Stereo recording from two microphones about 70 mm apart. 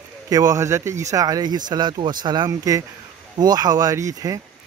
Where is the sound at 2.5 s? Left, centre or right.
Right.